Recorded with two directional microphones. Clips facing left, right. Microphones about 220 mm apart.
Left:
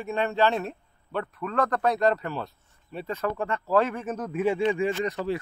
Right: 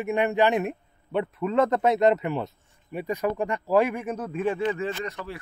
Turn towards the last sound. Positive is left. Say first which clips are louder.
# left 5 dB
turn(degrees=20)  # may be behind; listen again after turning